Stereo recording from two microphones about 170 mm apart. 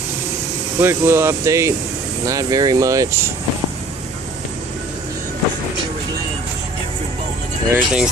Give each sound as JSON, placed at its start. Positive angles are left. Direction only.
{"t": 0.7, "sound": "speech", "side_deg": -15}
{"t": 7.7, "sound": "speech", "side_deg": -5}